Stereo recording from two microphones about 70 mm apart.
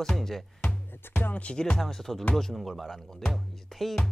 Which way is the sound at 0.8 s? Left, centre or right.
Left.